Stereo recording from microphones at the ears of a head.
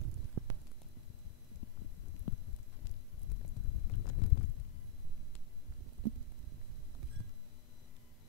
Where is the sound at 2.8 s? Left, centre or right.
Left.